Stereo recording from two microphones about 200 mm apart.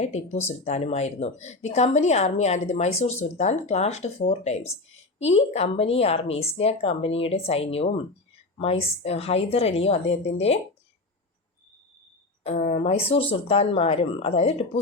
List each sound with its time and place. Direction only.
0.0 s speech: 35° left (ahead or behind)
12.5 s speech: 30° left (ahead or behind)